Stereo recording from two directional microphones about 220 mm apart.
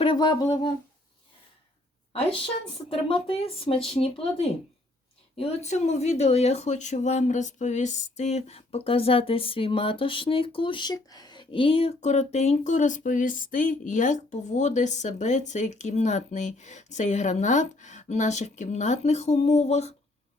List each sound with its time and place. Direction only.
0.0 s speech: 20° left (ahead or behind)
2.9 s speech: 25° left (ahead or behind)